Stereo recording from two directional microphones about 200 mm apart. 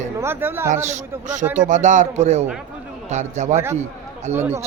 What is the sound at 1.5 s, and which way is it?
A man's voice, 40° right (ahead or behind).